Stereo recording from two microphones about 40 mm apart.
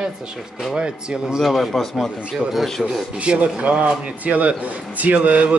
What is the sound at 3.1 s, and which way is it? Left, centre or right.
A man's voice, right.